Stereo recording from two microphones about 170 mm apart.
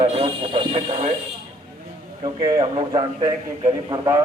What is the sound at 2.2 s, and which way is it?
A man's voice, 25° right (ahead or behind).